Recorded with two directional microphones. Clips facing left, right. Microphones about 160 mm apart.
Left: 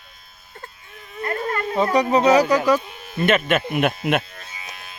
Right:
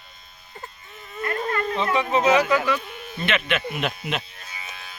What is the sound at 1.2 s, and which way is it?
Insect, 30° left (ahead or behind).